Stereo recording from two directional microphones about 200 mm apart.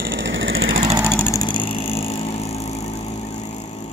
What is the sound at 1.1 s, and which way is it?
Vehicle, 15° left (ahead or behind).